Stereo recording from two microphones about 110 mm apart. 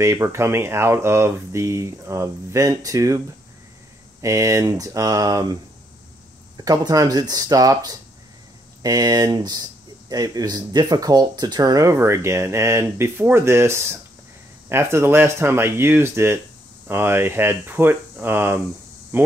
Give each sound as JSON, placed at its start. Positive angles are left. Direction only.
{"t": 0.0, "sound": "speech", "side_deg": -25}
{"t": 4.2, "sound": "speech", "side_deg": -30}